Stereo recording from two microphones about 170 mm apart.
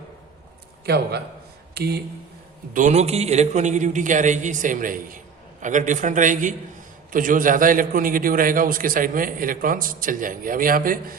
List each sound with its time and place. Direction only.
0.9 s a man's voice: 70° right (ahead or behind)
2.7 s a man's voice: 45° right (ahead or behind)